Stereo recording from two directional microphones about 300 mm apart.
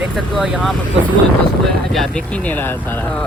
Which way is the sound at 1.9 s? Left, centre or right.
Centre.